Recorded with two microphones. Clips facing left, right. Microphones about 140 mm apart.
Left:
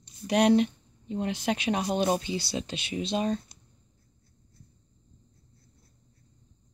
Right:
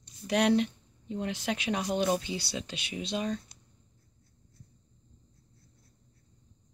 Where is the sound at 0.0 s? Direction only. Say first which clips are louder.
Left 4 dB; 20° left (ahead or behind).